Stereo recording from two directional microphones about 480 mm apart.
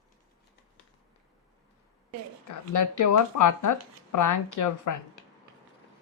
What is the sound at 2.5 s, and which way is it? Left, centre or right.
Speech, left.